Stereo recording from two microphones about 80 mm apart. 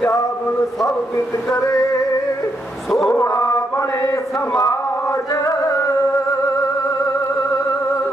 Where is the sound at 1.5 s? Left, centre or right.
Left.